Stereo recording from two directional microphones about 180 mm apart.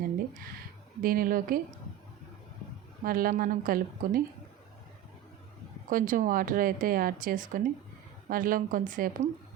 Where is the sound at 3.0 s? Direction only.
50° right (ahead or behind).